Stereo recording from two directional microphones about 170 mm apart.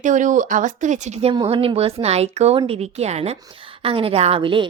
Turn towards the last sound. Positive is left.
turn(degrees=-30)  # may be behind; listen again after turning